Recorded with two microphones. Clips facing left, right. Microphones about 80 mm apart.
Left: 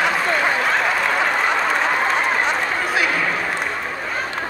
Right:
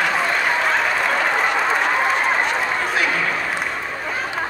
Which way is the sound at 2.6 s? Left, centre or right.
Centre.